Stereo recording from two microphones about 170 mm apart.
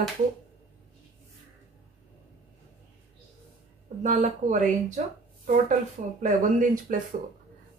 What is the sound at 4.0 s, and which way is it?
Speech, 45° right (ahead or behind).